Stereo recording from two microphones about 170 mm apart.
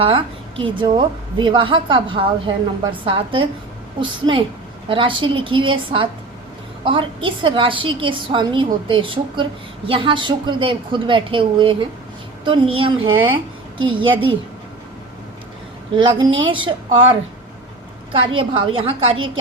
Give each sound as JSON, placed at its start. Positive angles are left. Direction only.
{"t": 0.0, "sound": "a woman's voice", "side_deg": -35}
{"t": 16.0, "sound": "a woman's voice", "side_deg": -30}